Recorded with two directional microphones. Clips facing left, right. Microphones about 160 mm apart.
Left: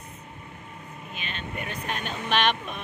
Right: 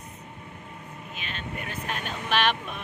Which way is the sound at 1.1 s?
Centre (ahead or behind).